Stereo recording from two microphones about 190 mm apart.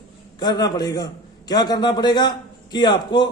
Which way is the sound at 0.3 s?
20° left (ahead or behind).